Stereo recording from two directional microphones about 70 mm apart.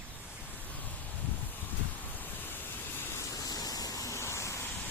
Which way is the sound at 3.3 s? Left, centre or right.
Left.